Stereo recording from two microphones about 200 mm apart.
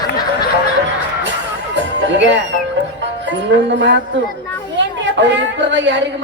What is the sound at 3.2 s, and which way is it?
A man's voice, 65° right (ahead or behind).